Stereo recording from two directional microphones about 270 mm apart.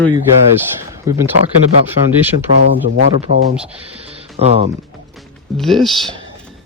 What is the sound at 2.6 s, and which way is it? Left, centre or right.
Speech, left.